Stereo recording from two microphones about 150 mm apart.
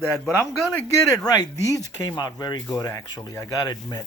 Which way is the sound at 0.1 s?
5° left (ahead or behind).